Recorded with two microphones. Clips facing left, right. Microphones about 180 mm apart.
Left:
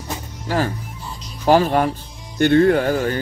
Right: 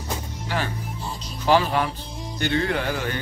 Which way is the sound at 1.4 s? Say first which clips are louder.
Left 5 dB; 45° left (ahead or behind).